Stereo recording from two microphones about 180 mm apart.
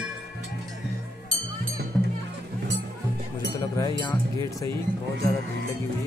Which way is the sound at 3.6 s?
20° left (ahead or behind).